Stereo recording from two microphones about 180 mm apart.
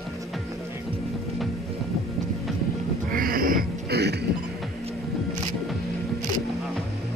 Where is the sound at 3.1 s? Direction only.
55° right (ahead or behind).